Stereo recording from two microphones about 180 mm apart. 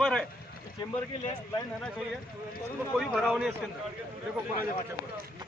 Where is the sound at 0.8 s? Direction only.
20° left (ahead or behind).